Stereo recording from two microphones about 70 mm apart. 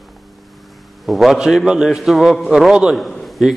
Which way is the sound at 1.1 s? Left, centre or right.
Centre.